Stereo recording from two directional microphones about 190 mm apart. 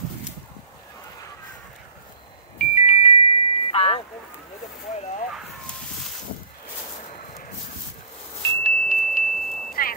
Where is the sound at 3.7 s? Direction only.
30° left (ahead or behind).